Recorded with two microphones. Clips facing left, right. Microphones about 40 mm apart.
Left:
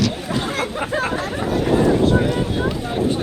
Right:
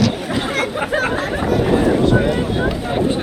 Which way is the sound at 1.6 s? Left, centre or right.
Centre.